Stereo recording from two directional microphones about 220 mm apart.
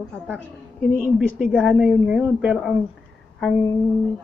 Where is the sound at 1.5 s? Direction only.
5° right (ahead or behind).